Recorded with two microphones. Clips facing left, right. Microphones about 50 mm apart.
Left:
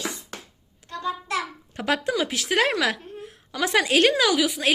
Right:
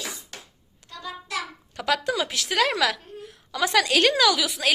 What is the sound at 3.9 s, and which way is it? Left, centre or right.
Speech, centre.